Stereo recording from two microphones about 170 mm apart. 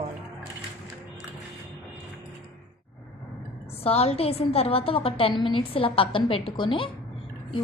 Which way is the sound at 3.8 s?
35° left (ahead or behind).